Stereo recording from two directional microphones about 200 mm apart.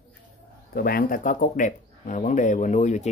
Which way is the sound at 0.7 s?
45° left (ahead or behind).